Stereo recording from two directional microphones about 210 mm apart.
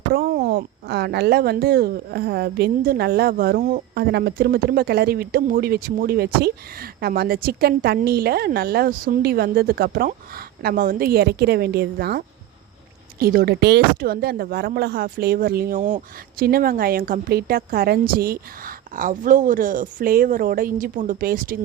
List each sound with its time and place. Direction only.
0.1 s speech: 45° right (ahead or behind)